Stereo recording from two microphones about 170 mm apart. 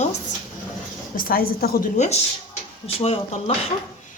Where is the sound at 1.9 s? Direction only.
40° left (ahead or behind).